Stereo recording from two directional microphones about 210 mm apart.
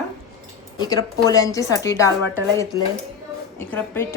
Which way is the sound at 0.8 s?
15° left (ahead or behind).